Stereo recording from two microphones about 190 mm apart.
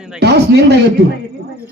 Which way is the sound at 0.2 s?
60° right (ahead or behind).